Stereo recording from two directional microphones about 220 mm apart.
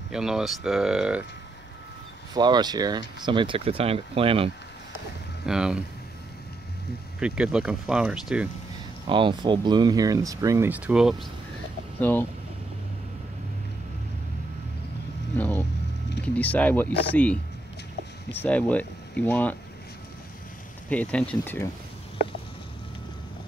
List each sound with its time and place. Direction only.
0.1 s speech: centre (ahead or behind)
2.3 s speech: 20° right (ahead or behind)
5.4 s speech: 5° right (ahead or behind)
7.2 s speech: 5° right (ahead or behind)
9.1 s speech: 20° right (ahead or behind); by 11.2 s centre (ahead or behind)
12.0 s speech: 10° left (ahead or behind)
15.3 s vehicle: 5° left (ahead or behind)
16.3 s speech: 5° left (ahead or behind)
20.9 s speech: 5° left (ahead or behind)